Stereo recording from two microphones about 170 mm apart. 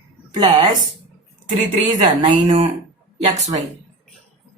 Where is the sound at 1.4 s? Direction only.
45° right (ahead or behind).